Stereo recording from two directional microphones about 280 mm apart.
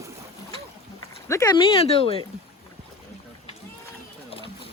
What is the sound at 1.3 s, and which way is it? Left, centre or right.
Speech, centre.